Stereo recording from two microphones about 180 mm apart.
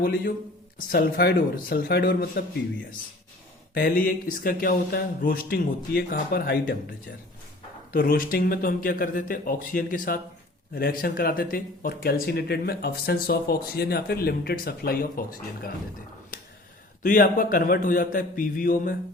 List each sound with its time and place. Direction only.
0.0 s speech: 60° left (ahead or behind)
3.8 s speech: 55° left (ahead or behind)
7.9 s speech: 55° left (ahead or behind)
17.0 s speech: 50° left (ahead or behind)